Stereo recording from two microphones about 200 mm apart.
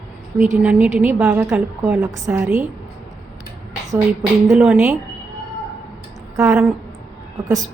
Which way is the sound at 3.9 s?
15° right (ahead or behind).